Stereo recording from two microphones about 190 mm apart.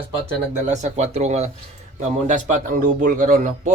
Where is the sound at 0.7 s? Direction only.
35° right (ahead or behind).